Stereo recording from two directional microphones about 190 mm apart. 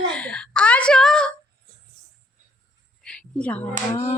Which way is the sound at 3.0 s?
5° left (ahead or behind).